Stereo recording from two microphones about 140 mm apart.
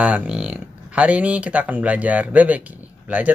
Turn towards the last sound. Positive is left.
turn(degrees=-10)  # may be behind; listen again after turning